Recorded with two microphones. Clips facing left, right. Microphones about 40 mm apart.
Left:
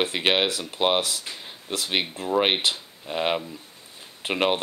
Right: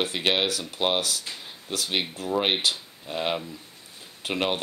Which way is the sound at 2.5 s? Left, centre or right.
Left.